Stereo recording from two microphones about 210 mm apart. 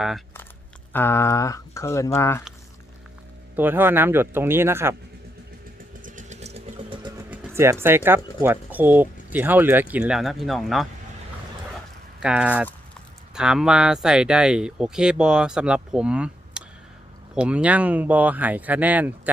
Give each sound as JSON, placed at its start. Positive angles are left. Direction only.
{"t": 0.9, "sound": "speech", "side_deg": 10}
{"t": 3.5, "sound": "speech", "side_deg": -10}
{"t": 6.0, "sound": "vehicle", "side_deg": -35}
{"t": 7.3, "sound": "speech", "side_deg": -10}
{"t": 12.2, "sound": "speech", "side_deg": -5}